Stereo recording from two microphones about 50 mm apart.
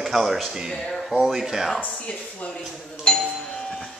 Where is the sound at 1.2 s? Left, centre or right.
Centre.